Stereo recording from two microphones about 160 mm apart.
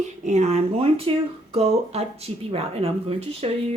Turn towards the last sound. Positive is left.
turn(degrees=-40)  # may be behind; listen again after turning